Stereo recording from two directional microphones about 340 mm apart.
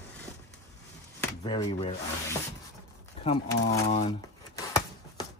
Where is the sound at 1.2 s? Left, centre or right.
Centre.